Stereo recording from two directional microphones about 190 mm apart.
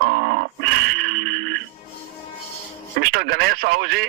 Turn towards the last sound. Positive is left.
turn(degrees=-60)  # may be behind; listen again after turning